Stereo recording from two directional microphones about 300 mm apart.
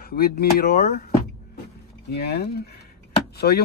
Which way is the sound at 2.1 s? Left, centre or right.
Left.